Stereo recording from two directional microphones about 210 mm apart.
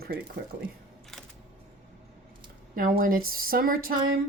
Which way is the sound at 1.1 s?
Centre (ahead or behind).